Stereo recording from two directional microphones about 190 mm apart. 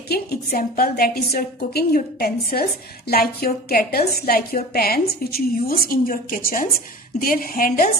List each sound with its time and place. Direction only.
0.1 s a woman's voice: 50° left (ahead or behind)